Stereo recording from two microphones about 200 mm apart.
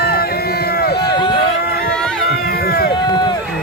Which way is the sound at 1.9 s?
5° left (ahead or behind).